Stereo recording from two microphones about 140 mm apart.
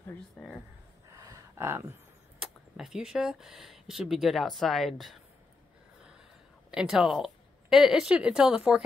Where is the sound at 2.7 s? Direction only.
5° right (ahead or behind).